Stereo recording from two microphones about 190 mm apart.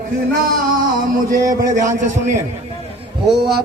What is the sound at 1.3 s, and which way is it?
Speech, 20° right (ahead or behind).